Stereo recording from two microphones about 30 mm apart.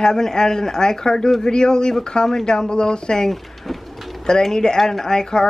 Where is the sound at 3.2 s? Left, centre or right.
Centre.